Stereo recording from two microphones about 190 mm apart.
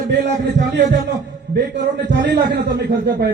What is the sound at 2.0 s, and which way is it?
A man's voice, 60° right (ahead or behind).